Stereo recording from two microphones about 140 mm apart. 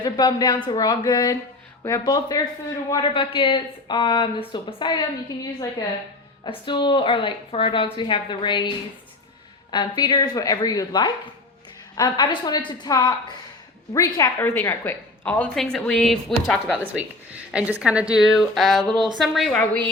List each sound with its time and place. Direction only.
0.0 s a woman's voice: 30° left (ahead or behind)
6.7 s speech: 35° left (ahead or behind)
9.7 s a woman's voice: 30° left (ahead or behind); by 16.7 s 5° left (ahead or behind)
16.7 s a woman's voice: 10° right (ahead or behind)